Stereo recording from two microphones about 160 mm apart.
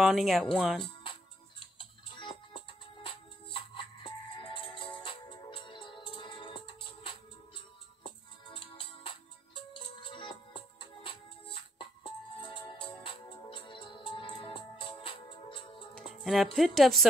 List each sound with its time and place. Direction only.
0.0 s a woman's voice: centre (ahead or behind)
1.6 s music: 30° left (ahead or behind)
16.3 s a woman's voice: centre (ahead or behind)